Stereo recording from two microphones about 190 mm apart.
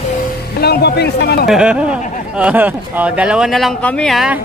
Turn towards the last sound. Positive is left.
turn(degrees=0)  # may be behind; listen again after turning